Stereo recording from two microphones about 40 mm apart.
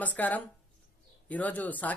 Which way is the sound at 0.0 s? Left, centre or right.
Left.